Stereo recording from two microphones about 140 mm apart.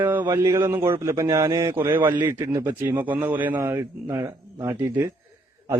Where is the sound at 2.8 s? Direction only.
10° right (ahead or behind).